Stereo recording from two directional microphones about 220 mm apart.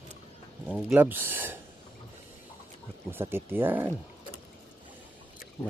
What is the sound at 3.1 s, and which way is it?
Speech, 10° right (ahead or behind).